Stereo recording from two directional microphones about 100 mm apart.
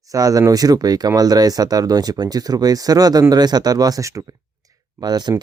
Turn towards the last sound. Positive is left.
turn(degrees=-45)  # may be behind; listen again after turning